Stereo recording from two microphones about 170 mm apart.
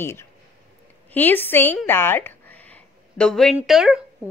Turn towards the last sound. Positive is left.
turn(degrees=-5)  # may be behind; listen again after turning